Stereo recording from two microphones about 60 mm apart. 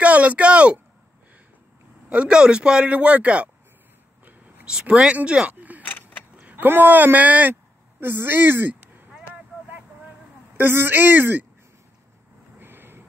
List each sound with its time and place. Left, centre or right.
0.0 s speech: right
2.0 s a man's voice: centre
4.6 s a man's voice: centre
5.5 s a sound: right
5.8 s keys jangling: left
6.3 s speech: right
10.6 s speech: right
12.5 s vehicle: right